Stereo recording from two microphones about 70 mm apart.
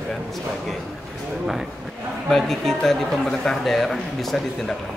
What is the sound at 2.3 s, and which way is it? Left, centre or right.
A man's voice, centre.